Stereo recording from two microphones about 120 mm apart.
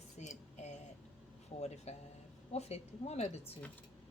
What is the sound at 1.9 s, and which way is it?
Speech, 65° left (ahead or behind).